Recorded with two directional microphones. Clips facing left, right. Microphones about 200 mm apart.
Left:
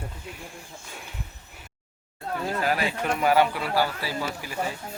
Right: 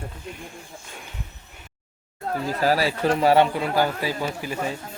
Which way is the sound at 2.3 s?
35° right (ahead or behind).